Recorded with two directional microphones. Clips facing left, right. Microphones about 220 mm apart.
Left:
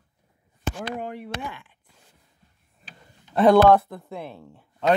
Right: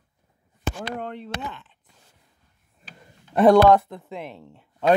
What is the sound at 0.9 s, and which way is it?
Speech, 10° left (ahead or behind).